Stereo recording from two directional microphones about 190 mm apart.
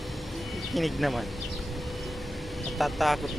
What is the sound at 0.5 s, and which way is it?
Speech, centre (ahead or behind).